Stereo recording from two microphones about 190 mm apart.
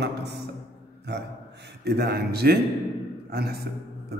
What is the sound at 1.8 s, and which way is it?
A man's voice, 60° right (ahead or behind).